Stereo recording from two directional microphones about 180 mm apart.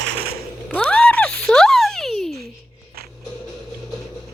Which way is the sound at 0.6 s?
5° left (ahead or behind).